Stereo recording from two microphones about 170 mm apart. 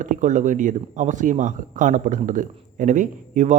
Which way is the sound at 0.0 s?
45° right (ahead or behind).